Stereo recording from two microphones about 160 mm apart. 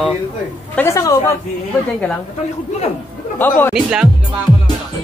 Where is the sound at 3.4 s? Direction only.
10° left (ahead or behind).